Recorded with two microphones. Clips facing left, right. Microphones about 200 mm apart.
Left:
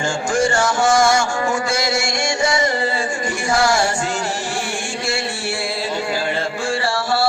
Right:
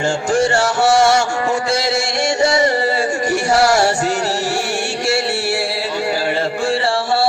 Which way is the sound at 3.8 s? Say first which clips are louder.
Right 4 dB; 40° right (ahead or behind).